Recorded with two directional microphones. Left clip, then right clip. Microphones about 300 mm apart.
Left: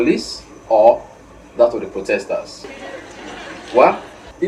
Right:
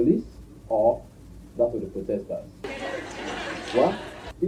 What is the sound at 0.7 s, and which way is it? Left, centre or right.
Speech, left.